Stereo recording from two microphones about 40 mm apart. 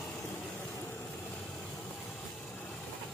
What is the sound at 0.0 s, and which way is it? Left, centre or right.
Vehicle, left.